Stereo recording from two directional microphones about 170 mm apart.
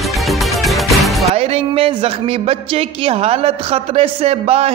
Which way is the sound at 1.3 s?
35° right (ahead or behind).